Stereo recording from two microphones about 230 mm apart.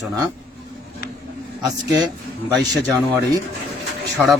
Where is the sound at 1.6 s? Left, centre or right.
Centre.